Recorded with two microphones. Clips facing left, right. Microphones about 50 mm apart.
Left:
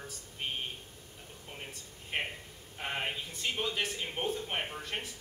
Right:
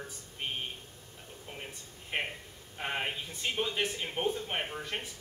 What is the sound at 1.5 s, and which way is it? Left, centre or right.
A man's voice, centre.